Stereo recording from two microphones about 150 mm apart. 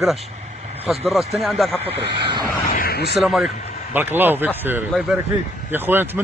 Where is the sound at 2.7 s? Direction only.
80° left.